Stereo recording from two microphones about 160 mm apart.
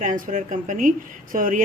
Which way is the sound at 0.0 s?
55° right (ahead or behind).